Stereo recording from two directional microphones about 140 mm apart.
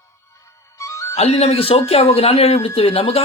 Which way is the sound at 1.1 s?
50° left (ahead or behind).